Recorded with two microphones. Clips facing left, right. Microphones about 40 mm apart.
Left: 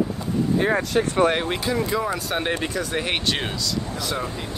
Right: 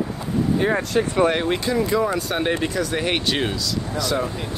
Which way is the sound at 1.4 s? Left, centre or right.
Centre.